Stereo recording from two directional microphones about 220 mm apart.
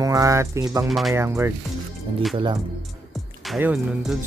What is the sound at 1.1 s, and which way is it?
Speech, 10° right (ahead or behind).